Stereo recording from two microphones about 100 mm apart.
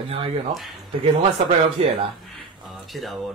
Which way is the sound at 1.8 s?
70° right (ahead or behind).